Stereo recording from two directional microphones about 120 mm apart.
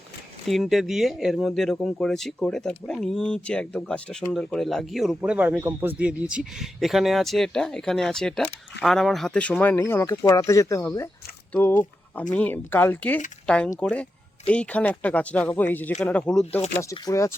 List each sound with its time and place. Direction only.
0.4 s speech: centre (ahead or behind)
6.3 s speech: centre (ahead or behind); by 11.1 s 20° left (ahead or behind)
12.3 s speech: 15° left (ahead or behind)
16.9 s speech: 25° left (ahead or behind)